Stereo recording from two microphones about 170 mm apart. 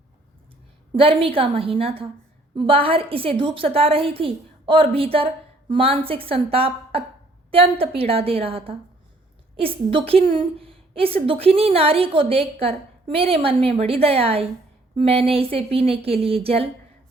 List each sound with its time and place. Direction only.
0.9 s a woman's voice: 35° right (ahead or behind)